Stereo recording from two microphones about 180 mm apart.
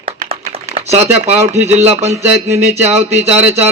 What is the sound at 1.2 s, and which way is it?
Speech, 40° right (ahead or behind).